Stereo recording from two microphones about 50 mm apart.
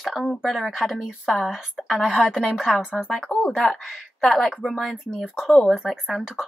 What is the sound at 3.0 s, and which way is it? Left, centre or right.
Speech, centre.